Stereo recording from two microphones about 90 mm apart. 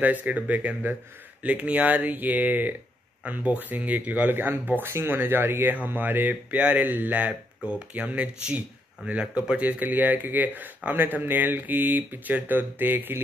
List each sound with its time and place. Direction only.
0.0 s speech: 20° right (ahead or behind)